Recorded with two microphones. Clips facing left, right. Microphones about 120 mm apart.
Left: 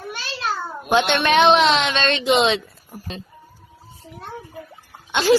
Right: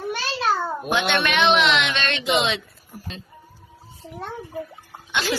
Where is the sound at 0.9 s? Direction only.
30° left (ahead or behind).